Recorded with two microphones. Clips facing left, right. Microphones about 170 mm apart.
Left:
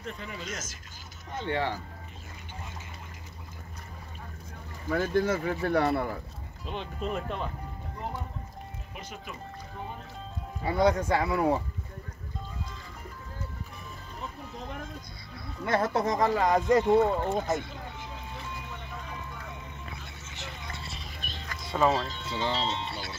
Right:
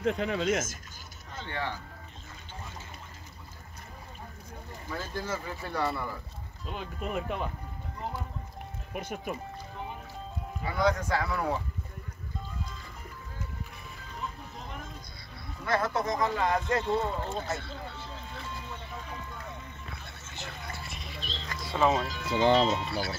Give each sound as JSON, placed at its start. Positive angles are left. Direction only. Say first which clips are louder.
{"t": 0.0, "sound": "speech", "louder": "right 11 dB", "side_deg": -80}
{"t": 1.5, "sound": "speech", "louder": "left 5 dB", "side_deg": 30}
{"t": 4.9, "sound": "speech", "louder": "left 9 dB", "side_deg": 55}
{"t": 6.7, "sound": "speech", "louder": "left 1 dB", "side_deg": -5}
{"t": 8.9, "sound": "speech", "louder": "right 8 dB", "side_deg": -50}
{"t": 10.6, "sound": "speech", "louder": "left 3 dB", "side_deg": 25}
{"t": 15.6, "sound": "speech", "louder": "left 2 dB", "side_deg": 30}
{"t": 16.8, "sound": "speech", "louder": "left 7 dB", "side_deg": 55}
{"t": 17.5, "sound": "vehicle", "louder": "left 5 dB", "side_deg": 15}
{"t": 20.0, "sound": "vehicle", "louder": "even", "side_deg": 15}
{"t": 21.2, "sound": "a sound", "louder": "right 2 dB", "side_deg": 55}
{"t": 21.5, "sound": "music", "louder": "left 1 dB", "side_deg": 0}
{"t": 22.3, "sound": "speech", "louder": "right 8 dB", "side_deg": -50}
{"t": 22.7, "sound": "speech", "louder": "right 4 dB", "side_deg": 25}